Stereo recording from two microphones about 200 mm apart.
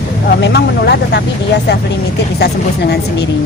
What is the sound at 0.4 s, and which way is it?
Speech, 55° left (ahead or behind).